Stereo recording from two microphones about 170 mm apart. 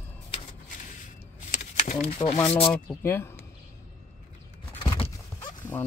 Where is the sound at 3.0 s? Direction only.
15° left (ahead or behind).